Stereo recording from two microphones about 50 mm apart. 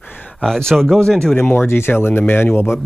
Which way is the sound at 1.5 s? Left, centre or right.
Left.